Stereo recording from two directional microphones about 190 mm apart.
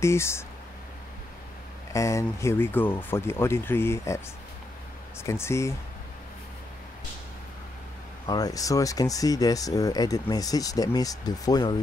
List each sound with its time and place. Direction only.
0.0 s speech: 15° left (ahead or behind)
1.9 s speech: 15° left (ahead or behind)
5.2 s speech: 15° left (ahead or behind)
8.3 s speech: 20° left (ahead or behind)